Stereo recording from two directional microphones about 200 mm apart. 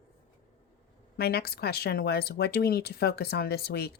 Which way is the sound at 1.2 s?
50° left (ahead or behind).